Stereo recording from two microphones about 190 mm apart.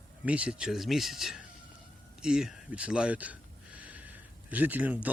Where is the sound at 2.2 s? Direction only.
5° right (ahead or behind).